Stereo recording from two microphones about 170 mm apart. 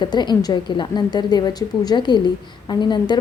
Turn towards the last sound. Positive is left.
turn(degrees=25)  # may be behind; listen again after turning